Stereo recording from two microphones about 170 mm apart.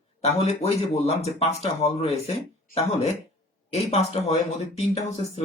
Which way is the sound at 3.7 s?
40° left (ahead or behind).